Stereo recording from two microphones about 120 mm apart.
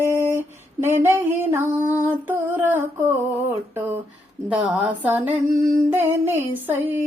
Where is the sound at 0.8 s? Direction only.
20° right (ahead or behind).